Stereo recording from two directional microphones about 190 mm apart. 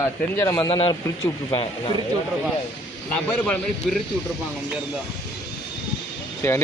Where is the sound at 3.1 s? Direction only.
5° left (ahead or behind).